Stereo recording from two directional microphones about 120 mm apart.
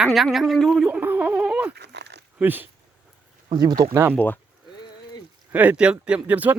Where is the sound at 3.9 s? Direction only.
20° right (ahead or behind).